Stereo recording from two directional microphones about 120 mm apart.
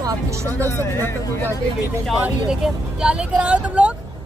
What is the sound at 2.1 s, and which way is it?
Speech, 5° right (ahead or behind).